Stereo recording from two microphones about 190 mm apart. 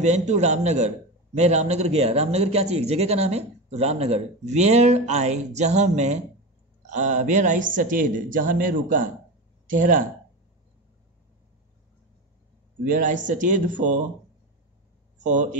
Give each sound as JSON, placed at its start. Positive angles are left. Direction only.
{"t": 0.0, "sound": "a woman's voice", "side_deg": -35}
{"t": 12.8, "sound": "a woman's voice", "side_deg": -45}